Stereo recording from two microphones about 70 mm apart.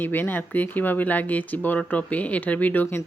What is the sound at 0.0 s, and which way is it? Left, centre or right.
Speech, left.